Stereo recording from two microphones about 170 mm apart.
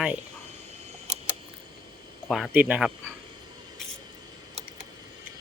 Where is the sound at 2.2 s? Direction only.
Centre (ahead or behind).